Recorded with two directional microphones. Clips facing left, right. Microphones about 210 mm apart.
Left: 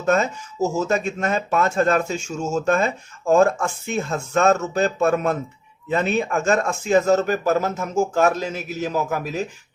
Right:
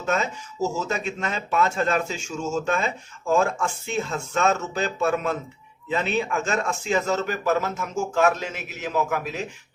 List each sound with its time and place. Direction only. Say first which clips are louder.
0.0 s speech: left 6 dB; 45° left (ahead or behind)